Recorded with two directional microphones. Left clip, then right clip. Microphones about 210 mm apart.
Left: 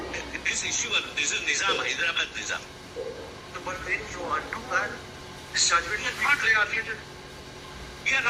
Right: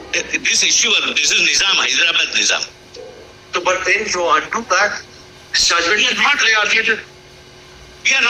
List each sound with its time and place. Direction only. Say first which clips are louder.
0.1 s a man's voice: right 15 dB; 45° right (ahead or behind)